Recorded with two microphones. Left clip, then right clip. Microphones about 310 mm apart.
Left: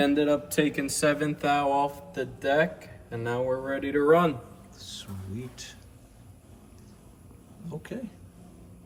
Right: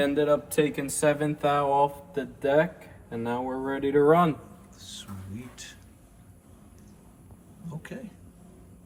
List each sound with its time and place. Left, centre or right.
0.1 s speech: centre
4.8 s speech: centre
7.7 s speech: centre